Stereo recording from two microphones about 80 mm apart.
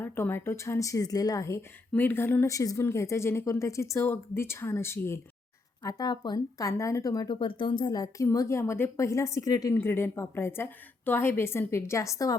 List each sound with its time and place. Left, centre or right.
0.0 s a woman's voice: left
2.0 s a woman's voice: left
2.5 s a woman's voice: left
5.8 s speech: left
6.6 s a woman's voice: left
7.3 s speech: left
8.2 s a woman's voice: left
9.7 s a woman's voice: left